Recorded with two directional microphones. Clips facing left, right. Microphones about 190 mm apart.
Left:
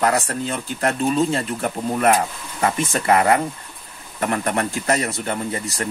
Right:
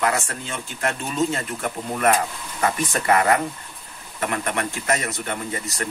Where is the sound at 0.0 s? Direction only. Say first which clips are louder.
Left 4 dB; 40° left (ahead or behind).